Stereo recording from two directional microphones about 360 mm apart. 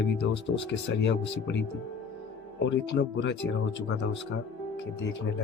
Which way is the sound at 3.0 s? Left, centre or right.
Left.